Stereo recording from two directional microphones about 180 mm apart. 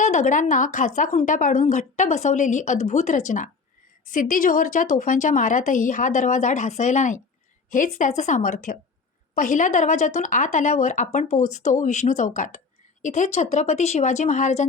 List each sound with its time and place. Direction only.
0.0 s speech: 45° left (ahead or behind)